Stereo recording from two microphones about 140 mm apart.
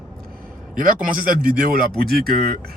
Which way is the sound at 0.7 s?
85° right.